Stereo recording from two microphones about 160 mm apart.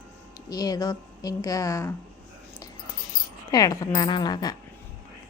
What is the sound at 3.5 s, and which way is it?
A woman's voice, 20° left (ahead or behind).